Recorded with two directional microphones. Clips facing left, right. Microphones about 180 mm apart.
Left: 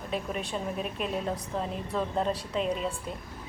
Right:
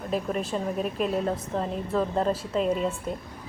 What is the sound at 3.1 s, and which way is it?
Speech, 45° right (ahead or behind).